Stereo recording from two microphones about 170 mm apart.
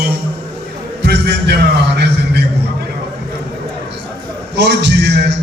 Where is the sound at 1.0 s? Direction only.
75° right (ahead or behind).